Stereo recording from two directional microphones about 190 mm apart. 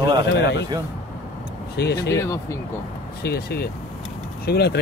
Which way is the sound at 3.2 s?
55° left (ahead or behind).